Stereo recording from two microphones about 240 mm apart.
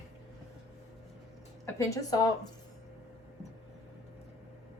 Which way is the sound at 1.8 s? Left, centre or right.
Centre.